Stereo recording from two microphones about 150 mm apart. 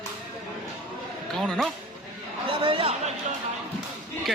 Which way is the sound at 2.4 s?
35° right (ahead or behind).